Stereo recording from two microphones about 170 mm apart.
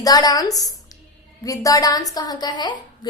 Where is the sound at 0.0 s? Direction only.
25° left (ahead or behind).